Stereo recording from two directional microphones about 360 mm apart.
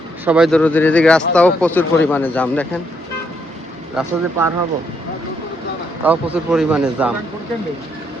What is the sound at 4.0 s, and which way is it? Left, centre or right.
Speech, centre.